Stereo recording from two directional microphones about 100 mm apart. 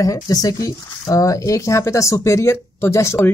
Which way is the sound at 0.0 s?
35° left (ahead or behind).